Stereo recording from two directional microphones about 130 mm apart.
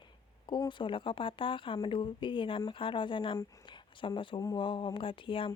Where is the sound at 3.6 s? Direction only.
40° left (ahead or behind).